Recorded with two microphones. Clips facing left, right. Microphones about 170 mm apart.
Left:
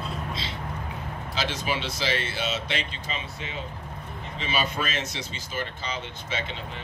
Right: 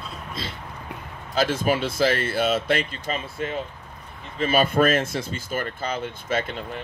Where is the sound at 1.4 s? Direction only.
50° right (ahead or behind).